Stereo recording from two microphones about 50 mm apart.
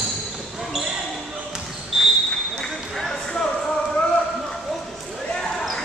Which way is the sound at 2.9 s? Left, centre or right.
Centre.